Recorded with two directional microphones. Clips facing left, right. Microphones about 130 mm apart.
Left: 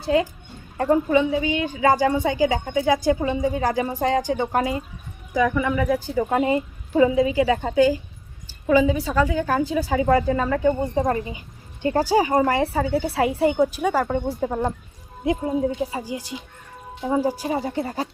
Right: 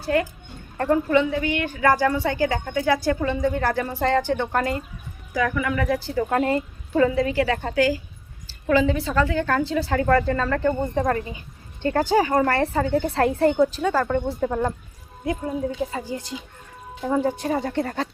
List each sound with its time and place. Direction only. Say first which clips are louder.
0.0 s a woman's voice: left 2 dB; 20° left (ahead or behind)
5.7 s a woman's voice: left 2 dB; 10° left (ahead or behind)